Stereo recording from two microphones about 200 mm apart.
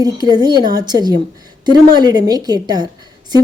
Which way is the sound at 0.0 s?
20° right (ahead or behind).